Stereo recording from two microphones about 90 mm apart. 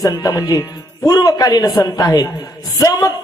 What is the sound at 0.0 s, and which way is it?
A man's voice, 40° left (ahead or behind).